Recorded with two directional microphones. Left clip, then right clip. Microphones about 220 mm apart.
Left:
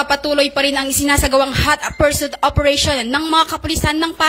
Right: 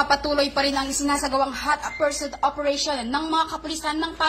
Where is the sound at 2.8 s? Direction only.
80° left.